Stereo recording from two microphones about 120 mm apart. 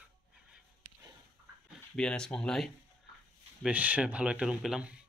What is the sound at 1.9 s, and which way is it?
Speech, 5° left (ahead or behind).